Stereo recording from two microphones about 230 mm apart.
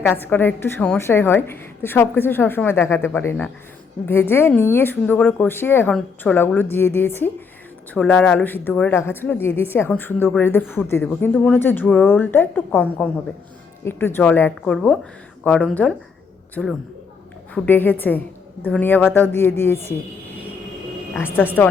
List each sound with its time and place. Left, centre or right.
0.0 s a woman's voice: centre